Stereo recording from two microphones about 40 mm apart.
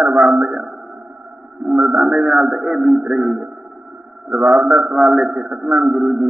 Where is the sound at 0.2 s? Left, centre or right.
Centre.